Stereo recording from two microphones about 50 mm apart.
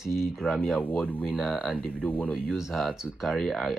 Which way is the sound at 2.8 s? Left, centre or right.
Centre.